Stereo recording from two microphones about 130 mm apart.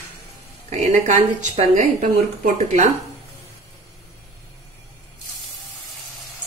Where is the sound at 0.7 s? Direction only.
65° right (ahead or behind).